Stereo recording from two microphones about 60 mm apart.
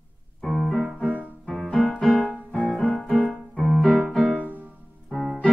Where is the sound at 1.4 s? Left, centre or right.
Centre.